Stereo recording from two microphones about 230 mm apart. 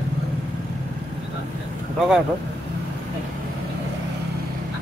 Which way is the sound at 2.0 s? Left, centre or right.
Centre.